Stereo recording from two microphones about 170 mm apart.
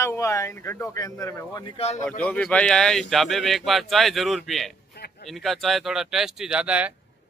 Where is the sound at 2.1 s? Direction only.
10° left (ahead or behind); by 6.9 s 5° right (ahead or behind).